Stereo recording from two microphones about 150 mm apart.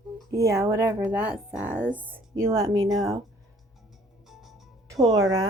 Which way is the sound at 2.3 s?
20° right (ahead or behind).